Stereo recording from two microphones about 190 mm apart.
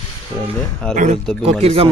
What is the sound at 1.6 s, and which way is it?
Speech, 30° right (ahead or behind).